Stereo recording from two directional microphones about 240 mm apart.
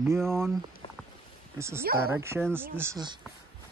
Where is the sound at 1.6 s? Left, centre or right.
Centre.